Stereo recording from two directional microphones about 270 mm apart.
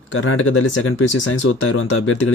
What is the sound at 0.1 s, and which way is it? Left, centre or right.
Speech, left.